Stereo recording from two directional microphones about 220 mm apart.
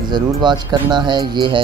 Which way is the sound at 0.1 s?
20° right (ahead or behind).